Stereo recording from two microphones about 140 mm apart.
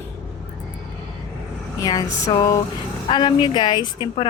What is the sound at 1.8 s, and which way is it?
A woman's voice, 25° left (ahead or behind).